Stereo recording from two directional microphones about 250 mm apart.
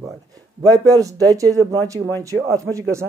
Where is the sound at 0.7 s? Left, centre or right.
Centre.